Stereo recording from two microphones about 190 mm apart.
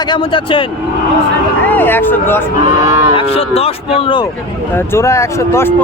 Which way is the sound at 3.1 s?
30° left (ahead or behind).